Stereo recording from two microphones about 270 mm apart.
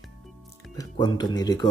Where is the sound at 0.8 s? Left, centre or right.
Centre.